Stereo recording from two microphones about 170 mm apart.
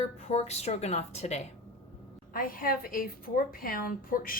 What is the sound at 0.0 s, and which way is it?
A woman's voice, 40° left (ahead or behind).